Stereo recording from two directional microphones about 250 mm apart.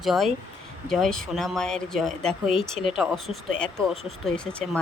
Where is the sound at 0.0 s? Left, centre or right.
Centre.